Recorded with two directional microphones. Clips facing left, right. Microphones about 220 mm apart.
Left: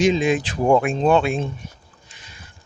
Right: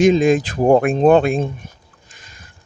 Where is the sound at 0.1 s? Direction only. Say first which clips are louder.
Right 5 dB; 45° right (ahead or behind).